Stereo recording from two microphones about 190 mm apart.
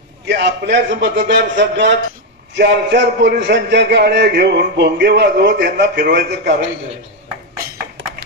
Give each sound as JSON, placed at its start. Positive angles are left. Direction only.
{"t": 0.3, "sound": "a man's voice", "side_deg": -65}